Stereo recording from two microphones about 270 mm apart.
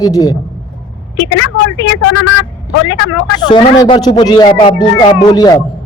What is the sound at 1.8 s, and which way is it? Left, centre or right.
Speech, left.